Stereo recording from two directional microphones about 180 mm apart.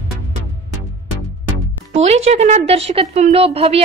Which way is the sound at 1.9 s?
35° right (ahead or behind).